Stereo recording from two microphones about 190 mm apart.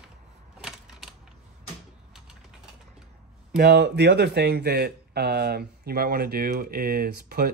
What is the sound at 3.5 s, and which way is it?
Speech, 60° right (ahead or behind).